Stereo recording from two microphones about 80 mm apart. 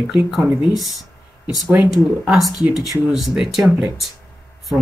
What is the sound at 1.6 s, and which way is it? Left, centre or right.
Speech, centre.